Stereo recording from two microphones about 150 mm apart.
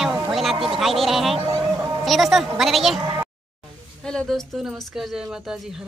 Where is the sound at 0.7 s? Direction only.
Centre (ahead or behind).